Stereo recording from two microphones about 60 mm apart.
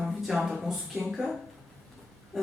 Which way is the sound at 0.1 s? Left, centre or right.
Centre.